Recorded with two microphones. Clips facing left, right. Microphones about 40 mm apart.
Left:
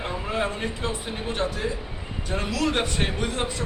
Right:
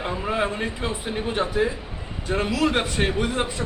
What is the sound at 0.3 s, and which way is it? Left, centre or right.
A man's voice, centre.